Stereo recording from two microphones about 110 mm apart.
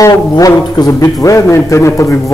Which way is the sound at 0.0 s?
35° left (ahead or behind).